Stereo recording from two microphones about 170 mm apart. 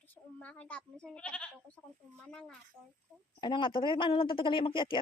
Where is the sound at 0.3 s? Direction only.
5° left (ahead or behind).